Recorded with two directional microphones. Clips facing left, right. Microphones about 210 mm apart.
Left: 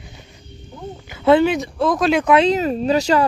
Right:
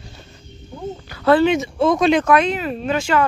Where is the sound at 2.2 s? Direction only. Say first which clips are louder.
Left 2 dB; 30° left (ahead or behind).